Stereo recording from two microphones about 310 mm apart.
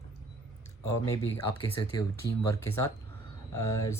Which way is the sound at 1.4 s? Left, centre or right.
Left.